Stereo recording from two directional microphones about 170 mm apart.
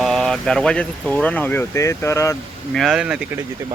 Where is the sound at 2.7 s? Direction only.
Centre (ahead or behind).